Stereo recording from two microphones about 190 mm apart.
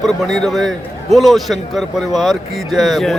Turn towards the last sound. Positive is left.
turn(degrees=0)  # may be behind; listen again after turning